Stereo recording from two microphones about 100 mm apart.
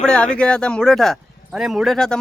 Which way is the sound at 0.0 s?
10° left (ahead or behind).